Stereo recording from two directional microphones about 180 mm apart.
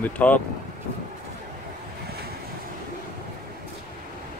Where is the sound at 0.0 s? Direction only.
10° left (ahead or behind).